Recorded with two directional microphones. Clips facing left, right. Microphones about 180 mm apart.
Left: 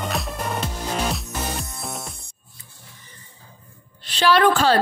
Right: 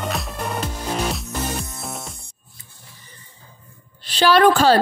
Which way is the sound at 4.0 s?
35° right (ahead or behind).